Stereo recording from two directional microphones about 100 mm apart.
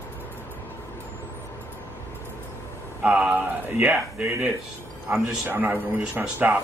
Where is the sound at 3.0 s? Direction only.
10° right (ahead or behind).